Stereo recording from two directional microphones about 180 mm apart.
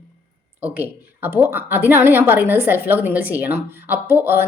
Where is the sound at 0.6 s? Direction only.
10° right (ahead or behind).